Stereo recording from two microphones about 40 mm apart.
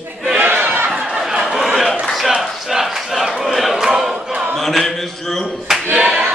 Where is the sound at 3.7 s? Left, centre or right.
Centre.